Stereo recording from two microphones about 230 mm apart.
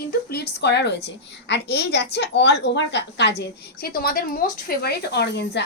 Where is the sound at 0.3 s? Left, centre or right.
Left.